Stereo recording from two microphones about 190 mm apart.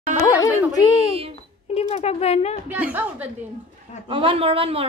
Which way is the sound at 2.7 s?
10° right (ahead or behind).